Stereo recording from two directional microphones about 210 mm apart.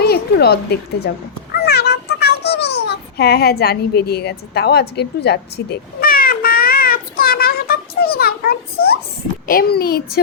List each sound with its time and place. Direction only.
0.0 s speech: 50° left (ahead or behind)
1.5 s a sound: 50° left (ahead or behind)
6.0 s child singing: 45° left (ahead or behind)
9.5 s a child's voice: 45° left (ahead or behind)